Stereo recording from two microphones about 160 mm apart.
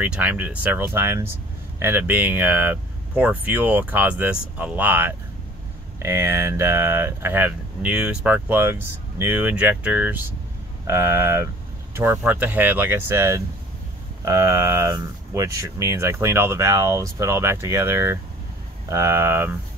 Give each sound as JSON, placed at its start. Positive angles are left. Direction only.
{"t": 0.0, "sound": "speech", "side_deg": -10}